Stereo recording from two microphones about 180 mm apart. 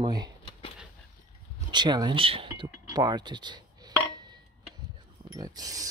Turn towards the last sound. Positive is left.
turn(degrees=-20)  # may be behind; listen again after turning